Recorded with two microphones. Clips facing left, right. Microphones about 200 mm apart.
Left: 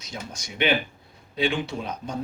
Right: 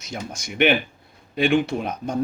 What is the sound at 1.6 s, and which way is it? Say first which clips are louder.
Speech: right 5 dB; 50° right (ahead or behind).